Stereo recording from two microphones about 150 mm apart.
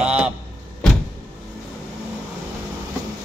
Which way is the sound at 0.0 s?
10° right (ahead or behind).